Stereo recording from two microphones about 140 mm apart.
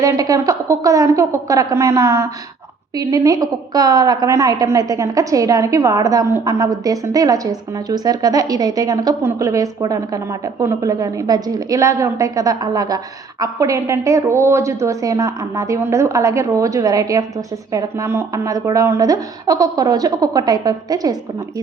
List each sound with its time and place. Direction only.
0.0 s a woman's voice: 25° right (ahead or behind)